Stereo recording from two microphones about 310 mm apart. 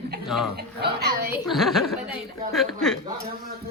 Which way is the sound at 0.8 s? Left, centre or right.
Right.